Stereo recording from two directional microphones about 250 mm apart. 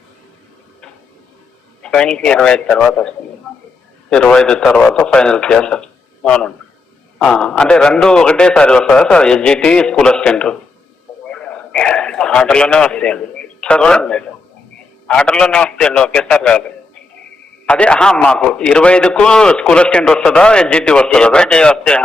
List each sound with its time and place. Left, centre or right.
1.8 s a man's voice: centre
11.3 s a sound: centre
15.0 s a man's voice: centre
17.7 s a man's voice: centre